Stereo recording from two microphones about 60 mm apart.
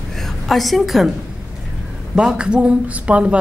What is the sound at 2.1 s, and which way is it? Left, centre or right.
Speech, centre.